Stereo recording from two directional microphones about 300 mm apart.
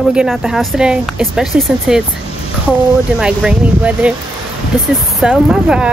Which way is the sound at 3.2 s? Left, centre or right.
Centre.